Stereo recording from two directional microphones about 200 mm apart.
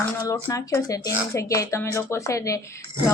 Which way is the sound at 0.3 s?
15° left (ahead or behind).